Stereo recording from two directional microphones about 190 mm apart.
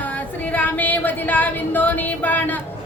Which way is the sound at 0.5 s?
10° left (ahead or behind).